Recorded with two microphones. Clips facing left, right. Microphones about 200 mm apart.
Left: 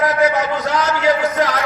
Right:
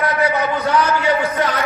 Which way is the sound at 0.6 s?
90° left.